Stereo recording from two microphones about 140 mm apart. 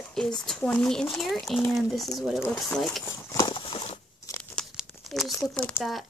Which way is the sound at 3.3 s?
35° left (ahead or behind).